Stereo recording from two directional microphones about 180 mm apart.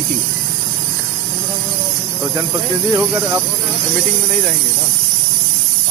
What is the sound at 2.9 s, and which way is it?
Speech, 15° right (ahead or behind).